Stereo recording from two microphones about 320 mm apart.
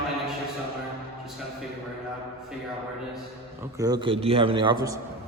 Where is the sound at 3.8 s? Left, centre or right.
Centre.